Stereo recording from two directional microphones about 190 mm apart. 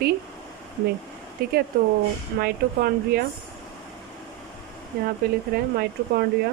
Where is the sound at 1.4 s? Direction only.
55° right (ahead or behind).